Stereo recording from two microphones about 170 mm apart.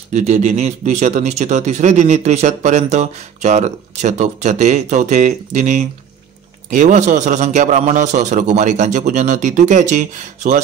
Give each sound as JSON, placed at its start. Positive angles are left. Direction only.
{"t": 0.1, "sound": "speech", "side_deg": -45}